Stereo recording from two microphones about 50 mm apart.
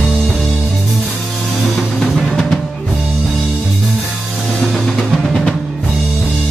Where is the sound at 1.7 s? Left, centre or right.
Centre.